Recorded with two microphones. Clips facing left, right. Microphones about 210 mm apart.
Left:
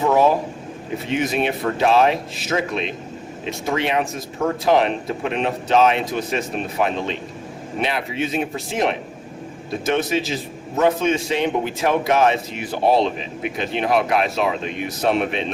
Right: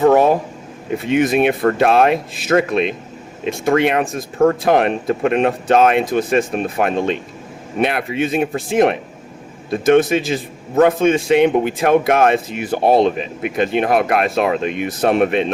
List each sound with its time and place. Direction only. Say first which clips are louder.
0.0 s a man's voice: right 4 dB; 55° right (ahead or behind)